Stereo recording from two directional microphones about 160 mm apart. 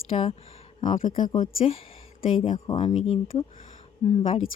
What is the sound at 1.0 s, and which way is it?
Speech, 55° left (ahead or behind).